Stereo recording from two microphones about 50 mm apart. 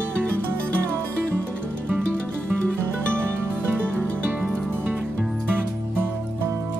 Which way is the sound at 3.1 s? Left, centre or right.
Right.